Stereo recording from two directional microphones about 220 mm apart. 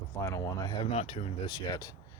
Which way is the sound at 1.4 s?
20° left (ahead or behind).